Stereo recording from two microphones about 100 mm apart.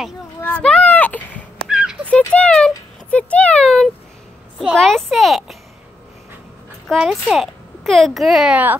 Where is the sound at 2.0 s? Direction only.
10° left (ahead or behind).